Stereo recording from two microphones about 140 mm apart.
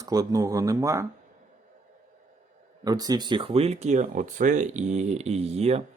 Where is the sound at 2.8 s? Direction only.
25° right (ahead or behind).